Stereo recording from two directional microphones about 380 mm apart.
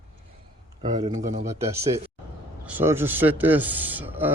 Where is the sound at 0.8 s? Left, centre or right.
Centre.